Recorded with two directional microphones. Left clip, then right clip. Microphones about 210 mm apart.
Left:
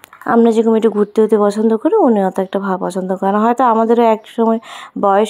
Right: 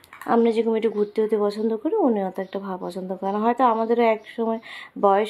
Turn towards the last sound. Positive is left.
turn(degrees=35)  # may be behind; listen again after turning